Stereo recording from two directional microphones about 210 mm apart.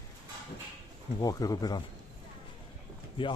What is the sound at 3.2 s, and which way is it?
Speech, 25° left (ahead or behind).